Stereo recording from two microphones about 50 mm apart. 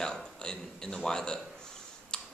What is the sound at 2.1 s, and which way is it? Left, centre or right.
Tick-tock, centre.